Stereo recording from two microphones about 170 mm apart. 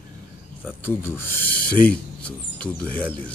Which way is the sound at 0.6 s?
10° right (ahead or behind).